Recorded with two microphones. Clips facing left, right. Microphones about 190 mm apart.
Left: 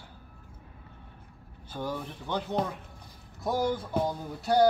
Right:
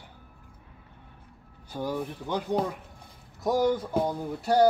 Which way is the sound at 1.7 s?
10° right (ahead or behind).